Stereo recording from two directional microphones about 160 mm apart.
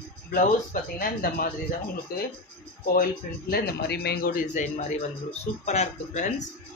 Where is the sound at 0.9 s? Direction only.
65° left (ahead or behind).